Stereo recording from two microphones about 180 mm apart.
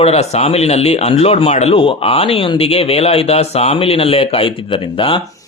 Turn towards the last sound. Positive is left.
turn(degrees=30)  # may be behind; listen again after turning